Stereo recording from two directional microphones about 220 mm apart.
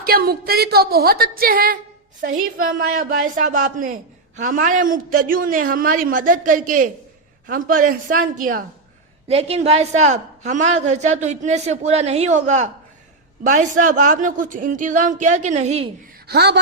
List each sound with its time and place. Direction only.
0.0 s a woman's voice: 45° right (ahead or behind)
9.2 s a woman's voice: 25° right (ahead or behind)
16.2 s speech: 50° right (ahead or behind)